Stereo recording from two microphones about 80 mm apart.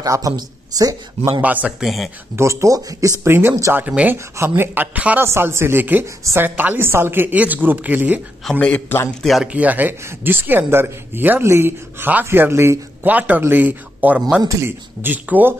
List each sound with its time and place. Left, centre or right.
0.0 s speech: right
1.4 s a woman's voice: centre
1.8 s speech: centre
2.3 s speech: right
3.3 s speech: right
3.7 s a woman's voice: centre
4.4 s a woman's voice: right
4.9 s a woman's voice: centre
5.2 s a woman's voice: right
8.5 s a man's voice: centre
9.2 s speech: centre
9.5 s a woman's voice: centre
13.1 s a woman's voice: centre